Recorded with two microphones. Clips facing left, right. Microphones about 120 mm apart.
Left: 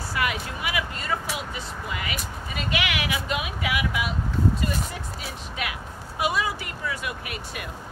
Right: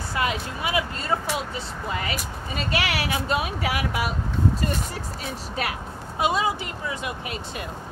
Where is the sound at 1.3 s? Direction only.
30° right (ahead or behind).